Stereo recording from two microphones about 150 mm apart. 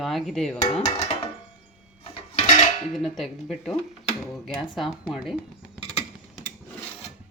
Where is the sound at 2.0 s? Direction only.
45° left (ahead or behind).